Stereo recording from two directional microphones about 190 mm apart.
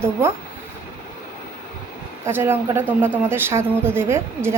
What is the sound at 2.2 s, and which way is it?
Speech, 10° right (ahead or behind).